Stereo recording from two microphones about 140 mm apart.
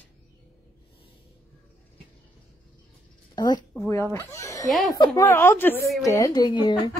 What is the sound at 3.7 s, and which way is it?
A woman's voice, 20° left (ahead or behind).